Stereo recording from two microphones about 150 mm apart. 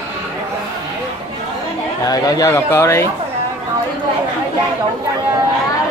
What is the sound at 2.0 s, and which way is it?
Speech, 25° left (ahead or behind).